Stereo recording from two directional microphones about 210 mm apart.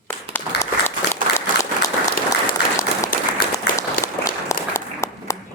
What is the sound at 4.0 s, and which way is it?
Applause, 15° left (ahead or behind).